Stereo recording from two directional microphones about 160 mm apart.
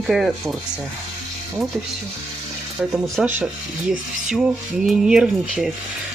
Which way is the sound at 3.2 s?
5° right (ahead or behind).